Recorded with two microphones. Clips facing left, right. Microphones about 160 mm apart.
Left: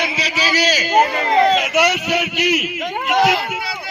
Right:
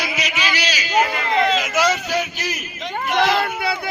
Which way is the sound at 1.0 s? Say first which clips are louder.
Left 4 dB; 35° left (ahead or behind).